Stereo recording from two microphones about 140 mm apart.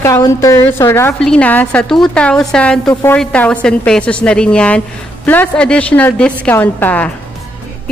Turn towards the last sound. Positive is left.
turn(degrees=10)  # may be behind; listen again after turning